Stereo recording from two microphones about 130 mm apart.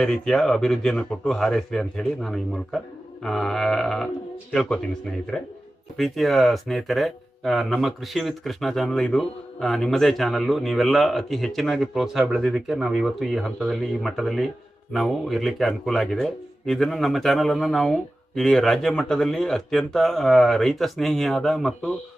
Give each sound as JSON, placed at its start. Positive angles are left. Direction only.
{"t": 0.0, "sound": "speech", "side_deg": 5}